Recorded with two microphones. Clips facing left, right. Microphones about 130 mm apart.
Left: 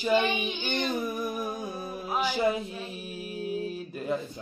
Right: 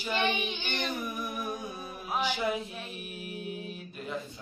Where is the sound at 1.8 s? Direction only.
40° left (ahead or behind).